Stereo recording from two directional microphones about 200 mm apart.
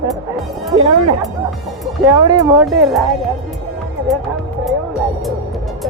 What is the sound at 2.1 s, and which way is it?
Speech, 20° right (ahead or behind).